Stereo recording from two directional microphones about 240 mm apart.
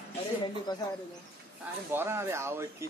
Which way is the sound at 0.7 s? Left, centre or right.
Centre.